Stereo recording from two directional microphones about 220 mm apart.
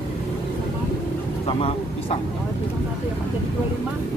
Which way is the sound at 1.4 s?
25° left (ahead or behind).